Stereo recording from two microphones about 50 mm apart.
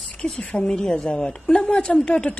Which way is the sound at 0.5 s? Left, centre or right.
Left.